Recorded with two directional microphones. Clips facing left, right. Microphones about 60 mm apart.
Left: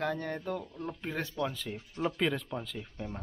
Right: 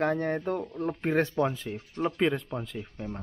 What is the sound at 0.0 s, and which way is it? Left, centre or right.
Speech, right.